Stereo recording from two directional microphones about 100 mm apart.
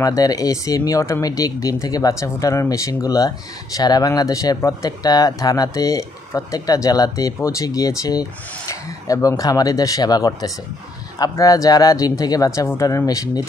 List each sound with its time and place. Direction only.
0.0 s speech: 35° left (ahead or behind)